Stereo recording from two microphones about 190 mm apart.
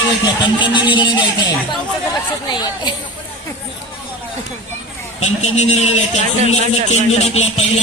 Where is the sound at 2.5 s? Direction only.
20° left (ahead or behind).